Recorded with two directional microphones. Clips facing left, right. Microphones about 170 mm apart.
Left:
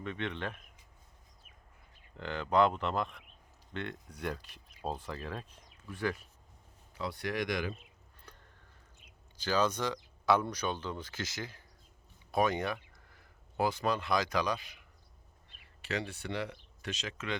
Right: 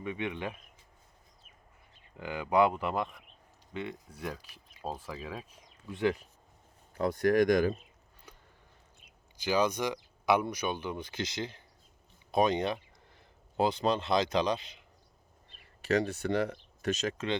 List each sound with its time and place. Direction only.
0.0 s speech: 10° right (ahead or behind)
2.1 s speech: 10° right (ahead or behind)
5.9 s speech: 25° right (ahead or behind)
6.9 s speech: 50° right (ahead or behind)
9.4 s speech: 10° right (ahead or behind)
15.8 s speech: 45° right (ahead or behind)